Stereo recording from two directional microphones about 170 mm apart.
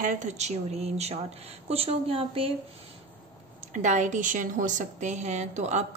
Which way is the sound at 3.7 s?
45° right (ahead or behind).